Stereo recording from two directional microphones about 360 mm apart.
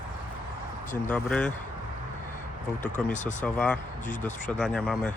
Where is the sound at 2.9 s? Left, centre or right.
Centre.